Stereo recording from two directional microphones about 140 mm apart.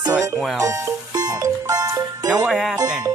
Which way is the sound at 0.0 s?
25° right (ahead or behind).